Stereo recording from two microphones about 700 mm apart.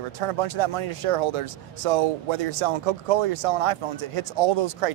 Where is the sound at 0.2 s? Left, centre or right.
Right.